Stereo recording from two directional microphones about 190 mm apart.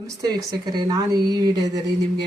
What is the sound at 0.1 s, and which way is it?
Speech, 20° right (ahead or behind).